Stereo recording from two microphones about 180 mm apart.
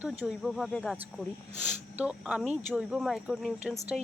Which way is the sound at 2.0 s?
5° right (ahead or behind).